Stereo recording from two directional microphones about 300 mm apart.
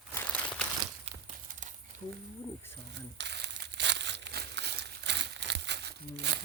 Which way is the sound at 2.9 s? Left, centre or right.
Right.